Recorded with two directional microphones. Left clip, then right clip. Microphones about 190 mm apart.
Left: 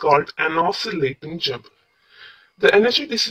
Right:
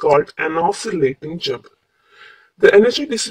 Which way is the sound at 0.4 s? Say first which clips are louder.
Right 1 dB; 45° right (ahead or behind).